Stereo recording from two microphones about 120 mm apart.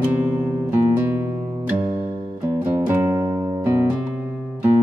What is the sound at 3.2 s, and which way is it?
Music, 40° right (ahead or behind).